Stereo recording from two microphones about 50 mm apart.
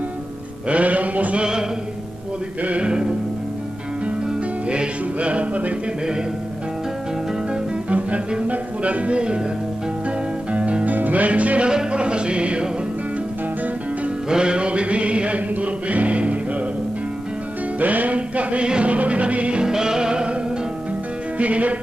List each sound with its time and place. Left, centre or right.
0.7 s music: right
1.4 s music: centre
2.6 s music: right
4.6 s music: right
7.9 s music: right
10.5 s music: right
14.3 s music: centre
17.7 s music: right
19.6 s music: centre
21.4 s music: right